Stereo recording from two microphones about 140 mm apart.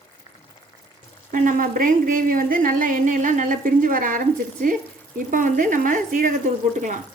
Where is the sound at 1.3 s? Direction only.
70° right (ahead or behind).